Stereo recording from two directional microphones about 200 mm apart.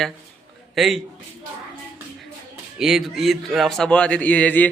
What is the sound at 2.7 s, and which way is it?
A man's voice, centre (ahead or behind).